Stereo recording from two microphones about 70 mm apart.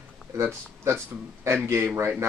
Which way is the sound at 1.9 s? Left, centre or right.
Right.